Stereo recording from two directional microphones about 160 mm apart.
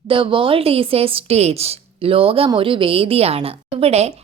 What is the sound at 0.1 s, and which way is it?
A woman's voice, 30° right (ahead or behind).